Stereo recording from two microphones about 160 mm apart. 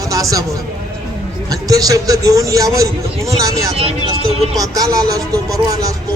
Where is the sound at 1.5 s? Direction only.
20° right (ahead or behind).